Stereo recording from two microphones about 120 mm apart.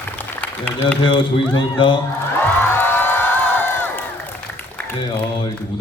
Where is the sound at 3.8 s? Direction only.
15° left (ahead or behind).